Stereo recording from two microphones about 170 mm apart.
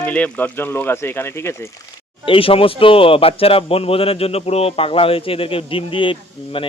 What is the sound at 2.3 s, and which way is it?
A man's voice, 35° left (ahead or behind).